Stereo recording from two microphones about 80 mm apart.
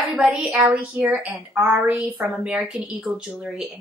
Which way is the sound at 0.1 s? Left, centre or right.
Centre.